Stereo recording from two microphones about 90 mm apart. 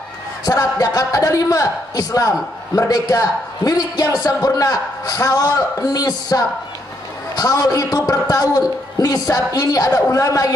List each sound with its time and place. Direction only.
0.5 s a man's voice: 40° left (ahead or behind)